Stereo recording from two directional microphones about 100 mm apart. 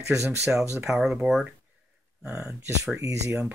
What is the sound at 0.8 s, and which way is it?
Speech, 5° right (ahead or behind).